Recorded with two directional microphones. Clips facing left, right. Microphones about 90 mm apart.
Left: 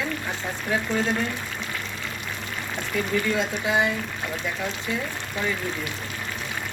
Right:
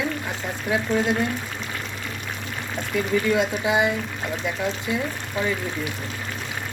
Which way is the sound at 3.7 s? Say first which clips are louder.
Right 1 dB; 15° right (ahead or behind).